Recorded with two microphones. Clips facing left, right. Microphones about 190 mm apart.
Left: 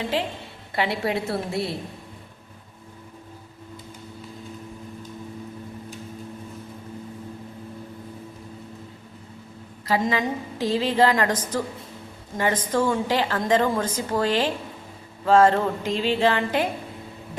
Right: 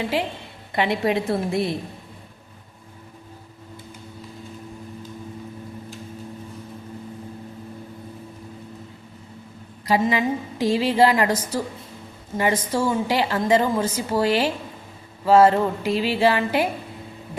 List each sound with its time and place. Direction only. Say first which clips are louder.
0.8 s a woman's voice: right 3 dB; 20° right (ahead or behind)
9.8 s a woman's voice: right 3 dB; 15° right (ahead or behind)